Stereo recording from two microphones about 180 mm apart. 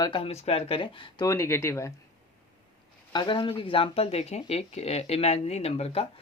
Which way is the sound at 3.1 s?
25° left (ahead or behind).